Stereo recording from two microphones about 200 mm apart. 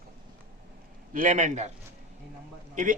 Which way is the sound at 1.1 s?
40° right (ahead or behind).